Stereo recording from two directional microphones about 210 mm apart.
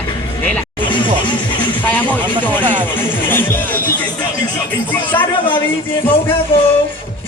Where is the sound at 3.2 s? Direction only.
10° left (ahead or behind).